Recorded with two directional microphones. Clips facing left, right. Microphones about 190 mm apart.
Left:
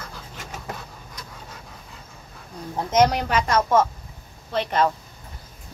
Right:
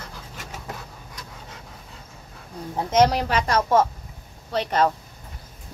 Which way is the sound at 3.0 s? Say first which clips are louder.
Even; 35° right (ahead or behind).